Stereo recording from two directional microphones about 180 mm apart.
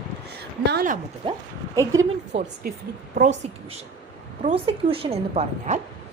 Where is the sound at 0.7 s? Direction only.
60° right (ahead or behind).